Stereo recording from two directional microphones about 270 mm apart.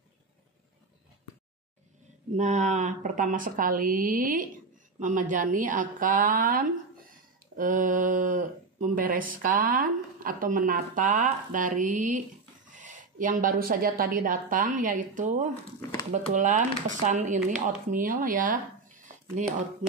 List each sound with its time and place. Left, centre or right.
2.3 s speech: right